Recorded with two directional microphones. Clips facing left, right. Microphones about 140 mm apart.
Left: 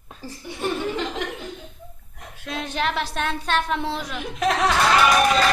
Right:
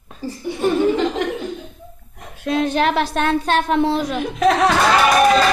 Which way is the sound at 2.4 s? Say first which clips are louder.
Right 9 dB; 60° right (ahead or behind).